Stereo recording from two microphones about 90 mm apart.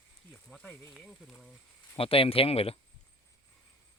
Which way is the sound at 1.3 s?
Centre (ahead or behind).